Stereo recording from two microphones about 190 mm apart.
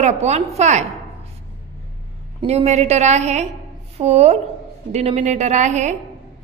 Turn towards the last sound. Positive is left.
turn(degrees=-40)  # may be behind; listen again after turning